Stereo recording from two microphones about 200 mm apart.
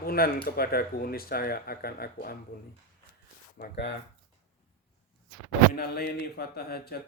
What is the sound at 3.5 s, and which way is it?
Speech, 50° left (ahead or behind).